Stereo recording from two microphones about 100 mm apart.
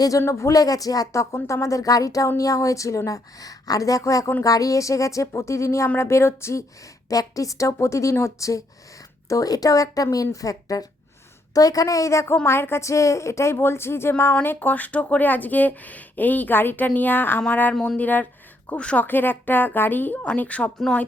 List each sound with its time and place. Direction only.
0.2 s a woman's voice: 30° left (ahead or behind); by 21.0 s 10° left (ahead or behind)